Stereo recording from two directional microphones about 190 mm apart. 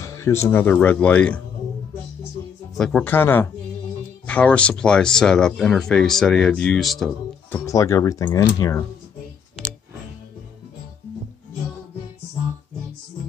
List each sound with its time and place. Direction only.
0.0 s music: 15° left (ahead or behind)
0.5 s speech: 10° left (ahead or behind)
2.8 s speech: 5° left (ahead or behind)
7.5 s speech: 15° left (ahead or behind)